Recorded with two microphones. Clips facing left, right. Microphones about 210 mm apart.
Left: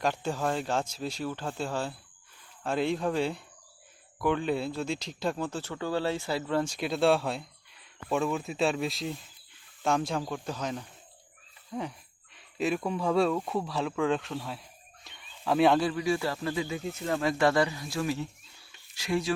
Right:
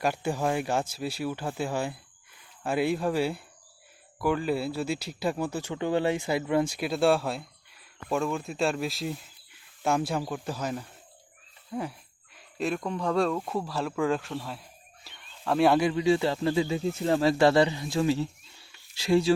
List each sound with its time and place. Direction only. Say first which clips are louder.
0.0 s speech: right 2 dB; 10° right (ahead or behind)
15.8 s speech: right 4 dB; 20° right (ahead or behind)